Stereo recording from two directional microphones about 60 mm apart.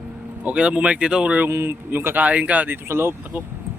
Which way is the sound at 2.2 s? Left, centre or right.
Right.